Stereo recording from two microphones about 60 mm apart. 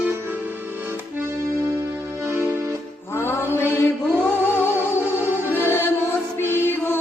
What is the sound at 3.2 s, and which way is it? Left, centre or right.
Music, left.